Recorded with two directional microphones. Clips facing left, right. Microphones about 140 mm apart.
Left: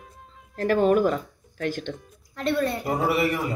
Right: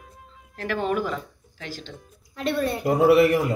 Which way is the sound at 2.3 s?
5° right (ahead or behind).